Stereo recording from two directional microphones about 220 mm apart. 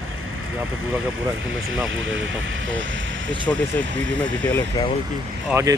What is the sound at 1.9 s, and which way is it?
Speech, 60° right (ahead or behind).